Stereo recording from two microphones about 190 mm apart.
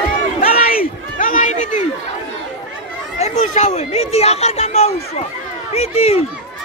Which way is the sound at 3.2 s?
35° left (ahead or behind).